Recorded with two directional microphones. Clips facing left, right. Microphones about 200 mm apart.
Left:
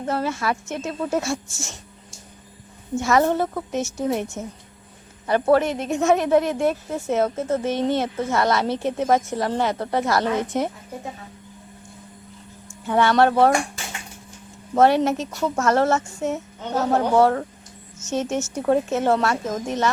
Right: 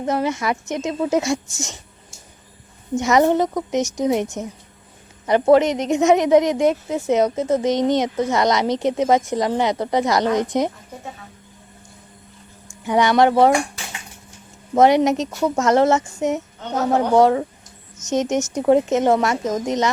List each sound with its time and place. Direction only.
0.0 s a woman's voice: 15° right (ahead or behind)
2.9 s a woman's voice: 20° right (ahead or behind)
12.8 s a woman's voice: 15° right (ahead or behind)
14.8 s a woman's voice: 15° right (ahead or behind)